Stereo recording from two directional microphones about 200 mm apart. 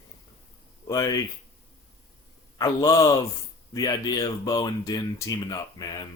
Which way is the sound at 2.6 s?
15° left (ahead or behind).